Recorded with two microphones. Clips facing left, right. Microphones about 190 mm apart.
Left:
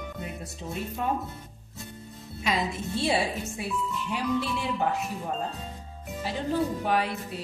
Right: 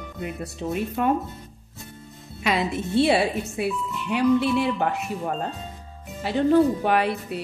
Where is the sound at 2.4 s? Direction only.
65° right (ahead or behind).